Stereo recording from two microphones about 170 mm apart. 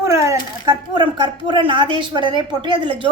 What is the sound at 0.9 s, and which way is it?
A woman's voice, 25° right (ahead or behind).